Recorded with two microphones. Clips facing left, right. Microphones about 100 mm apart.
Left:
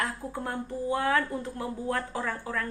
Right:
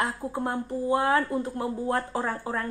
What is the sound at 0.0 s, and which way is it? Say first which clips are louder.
Speech: right 4 dB; 25° right (ahead or behind).